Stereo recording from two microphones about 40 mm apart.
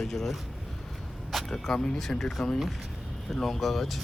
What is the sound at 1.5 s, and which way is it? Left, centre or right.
Speech, centre.